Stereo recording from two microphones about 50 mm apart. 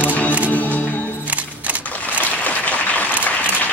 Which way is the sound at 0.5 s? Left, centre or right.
Left.